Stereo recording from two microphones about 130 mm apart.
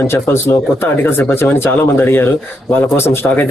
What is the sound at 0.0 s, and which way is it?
Speech, 20° left (ahead or behind).